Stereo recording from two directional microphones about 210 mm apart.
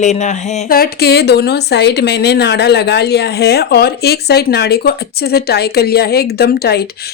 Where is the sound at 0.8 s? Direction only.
50° left (ahead or behind).